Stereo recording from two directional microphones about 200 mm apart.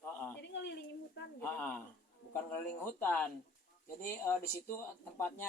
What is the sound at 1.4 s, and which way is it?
A man's voice, 10° left (ahead or behind).